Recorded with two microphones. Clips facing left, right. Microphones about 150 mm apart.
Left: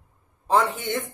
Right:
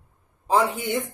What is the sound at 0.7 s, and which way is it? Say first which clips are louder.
Speech: right 2 dB; 15° right (ahead or behind).